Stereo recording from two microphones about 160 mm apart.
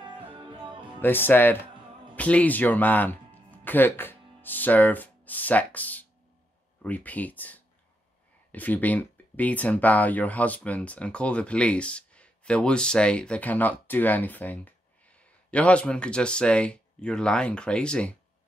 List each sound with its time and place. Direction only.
0.3 s music: 30° right (ahead or behind)
1.0 s speech: 10° left (ahead or behind)